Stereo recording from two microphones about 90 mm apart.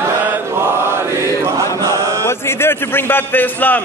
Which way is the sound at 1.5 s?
35° right (ahead or behind).